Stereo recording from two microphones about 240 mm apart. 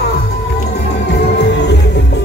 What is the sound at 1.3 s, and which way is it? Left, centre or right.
Music, left.